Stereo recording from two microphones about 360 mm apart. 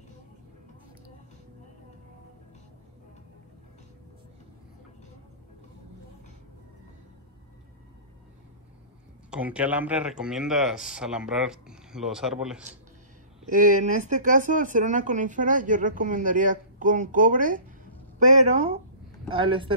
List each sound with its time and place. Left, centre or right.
9.3 s speech: centre
13.5 s speech: right